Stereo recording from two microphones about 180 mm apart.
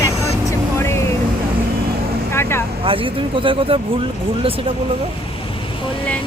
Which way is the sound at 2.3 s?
15° left (ahead or behind).